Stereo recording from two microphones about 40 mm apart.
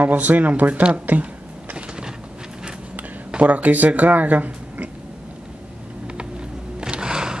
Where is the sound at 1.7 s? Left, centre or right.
Right.